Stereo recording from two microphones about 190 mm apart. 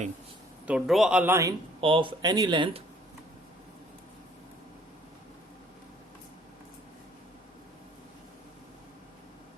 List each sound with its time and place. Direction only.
0.7 s speech: centre (ahead or behind)
1.8 s speech: 25° right (ahead or behind)